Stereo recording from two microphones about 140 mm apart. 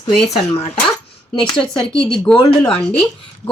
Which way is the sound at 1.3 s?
35° left (ahead or behind).